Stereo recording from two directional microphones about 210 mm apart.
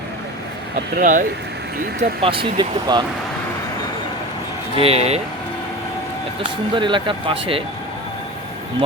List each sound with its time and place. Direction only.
0.9 s speech: 40° right (ahead or behind)
2.0 s speech: 25° right (ahead or behind)
4.8 s speech: 30° right (ahead or behind)
6.7 s speech: 25° right (ahead or behind)